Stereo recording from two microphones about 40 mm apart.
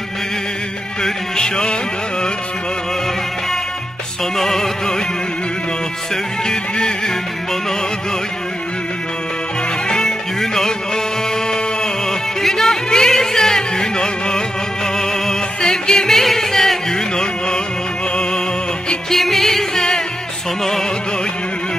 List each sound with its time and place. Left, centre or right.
1.0 s music: centre
4.4 s music: centre
6.4 s music: centre
9.8 s music: centre
11.8 s music: centre
19.1 s music: centre